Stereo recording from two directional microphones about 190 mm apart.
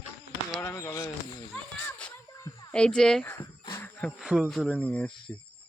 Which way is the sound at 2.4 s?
20° left (ahead or behind).